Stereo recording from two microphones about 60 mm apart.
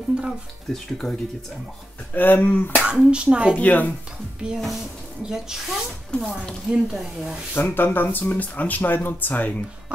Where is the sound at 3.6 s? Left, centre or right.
Left.